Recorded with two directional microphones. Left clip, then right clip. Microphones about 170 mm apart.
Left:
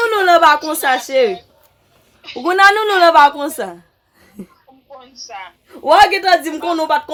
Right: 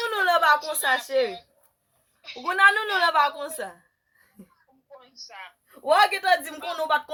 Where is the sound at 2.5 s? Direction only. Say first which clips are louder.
Left 8 dB; 30° left (ahead or behind).